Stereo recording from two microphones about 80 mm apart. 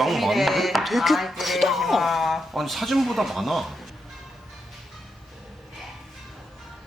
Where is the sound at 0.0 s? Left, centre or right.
Centre.